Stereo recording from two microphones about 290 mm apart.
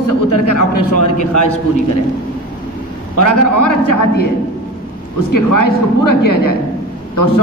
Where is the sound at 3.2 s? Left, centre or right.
Left.